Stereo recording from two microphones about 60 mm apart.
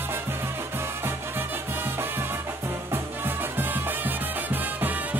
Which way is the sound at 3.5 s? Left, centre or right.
Right.